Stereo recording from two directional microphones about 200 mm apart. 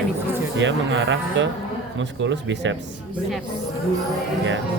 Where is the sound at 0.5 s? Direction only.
70° right (ahead or behind).